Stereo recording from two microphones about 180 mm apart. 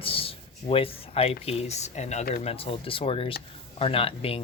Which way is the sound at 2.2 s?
50° left (ahead or behind).